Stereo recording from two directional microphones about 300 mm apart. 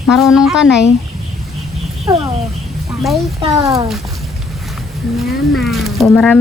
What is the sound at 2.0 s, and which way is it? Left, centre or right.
Speech, centre.